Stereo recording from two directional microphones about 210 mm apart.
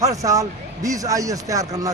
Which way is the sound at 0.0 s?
15° right (ahead or behind).